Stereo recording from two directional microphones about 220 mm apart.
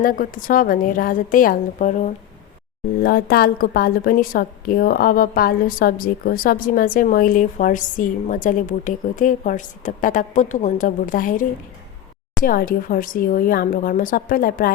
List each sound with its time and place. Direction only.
0.0 s a woman's voice: 40° left (ahead or behind)